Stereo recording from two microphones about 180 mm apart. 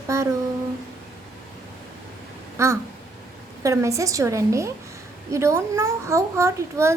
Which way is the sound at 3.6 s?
15° right (ahead or behind).